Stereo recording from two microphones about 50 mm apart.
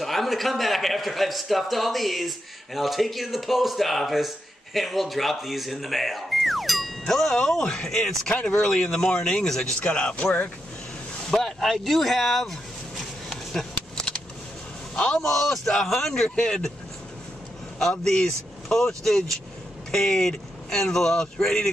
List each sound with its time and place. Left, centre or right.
0.0 s a man's voice: centre; by 10.5 s left
11.2 s a sound: centre
15.0 s speech: centre
17.7 s speech: centre